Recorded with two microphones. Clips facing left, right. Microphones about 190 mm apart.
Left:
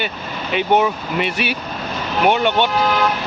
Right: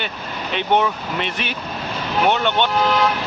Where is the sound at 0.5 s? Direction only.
10° left (ahead or behind).